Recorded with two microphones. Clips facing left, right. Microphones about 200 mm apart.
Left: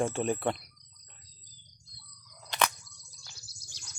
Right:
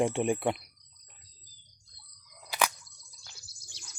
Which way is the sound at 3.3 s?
55° right (ahead or behind).